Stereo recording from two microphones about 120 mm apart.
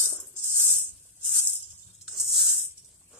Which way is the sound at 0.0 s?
20° right (ahead or behind).